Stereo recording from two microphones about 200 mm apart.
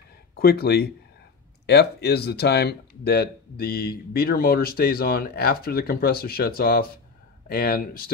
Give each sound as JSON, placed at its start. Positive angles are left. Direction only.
{"t": 0.4, "sound": "speech", "side_deg": 50}